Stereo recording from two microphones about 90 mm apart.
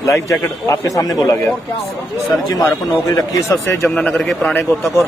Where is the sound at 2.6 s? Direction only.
40° left (ahead or behind).